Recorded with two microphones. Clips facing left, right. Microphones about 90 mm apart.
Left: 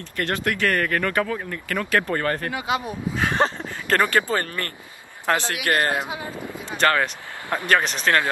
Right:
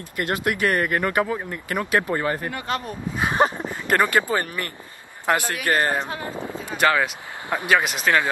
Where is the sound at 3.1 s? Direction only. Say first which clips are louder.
Right 2 dB; 15° right (ahead or behind).